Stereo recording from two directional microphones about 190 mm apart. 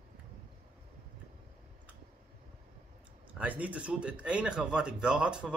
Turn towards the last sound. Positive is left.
turn(degrees=-5)  # may be behind; listen again after turning